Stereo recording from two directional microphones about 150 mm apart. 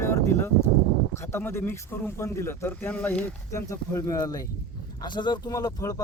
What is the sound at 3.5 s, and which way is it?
Speech, 20° left (ahead or behind).